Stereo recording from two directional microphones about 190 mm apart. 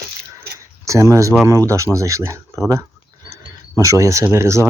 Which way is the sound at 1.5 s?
15° right (ahead or behind).